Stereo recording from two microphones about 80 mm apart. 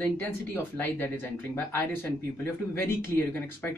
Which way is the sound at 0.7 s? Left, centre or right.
Left.